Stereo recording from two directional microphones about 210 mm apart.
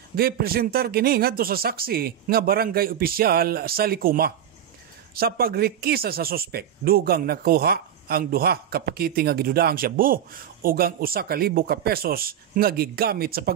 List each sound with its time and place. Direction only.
0.1 s speech: 45° right (ahead or behind)